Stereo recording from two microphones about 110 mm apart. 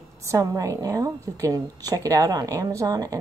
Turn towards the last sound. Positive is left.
turn(degrees=-35)  # may be behind; listen again after turning